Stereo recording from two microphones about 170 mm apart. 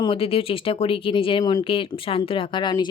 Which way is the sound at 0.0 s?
35° left (ahead or behind).